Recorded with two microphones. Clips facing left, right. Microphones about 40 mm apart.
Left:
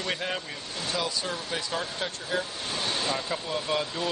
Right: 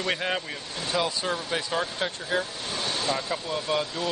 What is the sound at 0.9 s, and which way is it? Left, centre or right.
Speech, centre.